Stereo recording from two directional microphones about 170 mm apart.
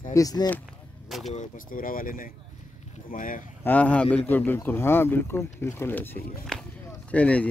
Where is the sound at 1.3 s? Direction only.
55° left (ahead or behind).